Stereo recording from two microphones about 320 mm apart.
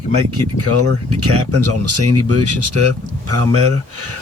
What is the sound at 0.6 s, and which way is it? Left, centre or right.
Speech, right.